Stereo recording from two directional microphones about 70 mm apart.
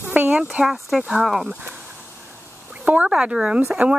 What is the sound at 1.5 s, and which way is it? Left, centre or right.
Speech, right.